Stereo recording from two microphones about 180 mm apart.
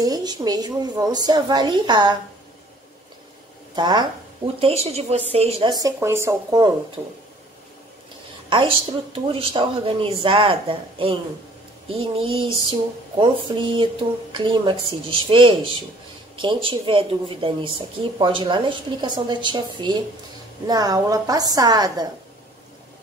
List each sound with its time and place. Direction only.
0.0 s a woman's voice: 20° right (ahead or behind)
3.7 s a woman's voice: 25° right (ahead or behind)
8.5 s a woman's voice: 30° right (ahead or behind)